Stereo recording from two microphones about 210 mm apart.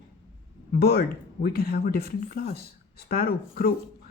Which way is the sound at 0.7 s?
50° left (ahead or behind).